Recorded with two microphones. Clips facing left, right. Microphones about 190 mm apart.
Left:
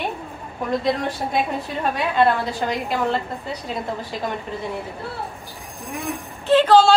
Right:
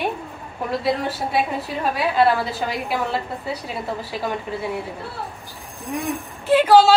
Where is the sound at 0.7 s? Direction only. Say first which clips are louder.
Left 1 dB; 5° right (ahead or behind).